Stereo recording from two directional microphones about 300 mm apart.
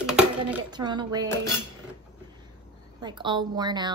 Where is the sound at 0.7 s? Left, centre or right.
Centre.